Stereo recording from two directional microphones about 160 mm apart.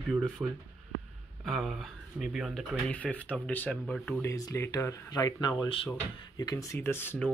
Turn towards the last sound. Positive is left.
turn(degrees=15)  # may be behind; listen again after turning